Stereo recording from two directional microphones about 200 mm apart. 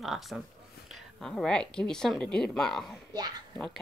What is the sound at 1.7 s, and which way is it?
Speech, 5° left (ahead or behind).